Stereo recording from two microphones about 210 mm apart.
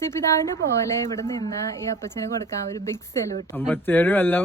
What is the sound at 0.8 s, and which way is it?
Speech, 15° left (ahead or behind).